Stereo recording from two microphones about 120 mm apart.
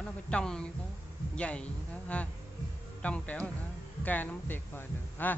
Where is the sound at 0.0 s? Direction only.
5° left (ahead or behind).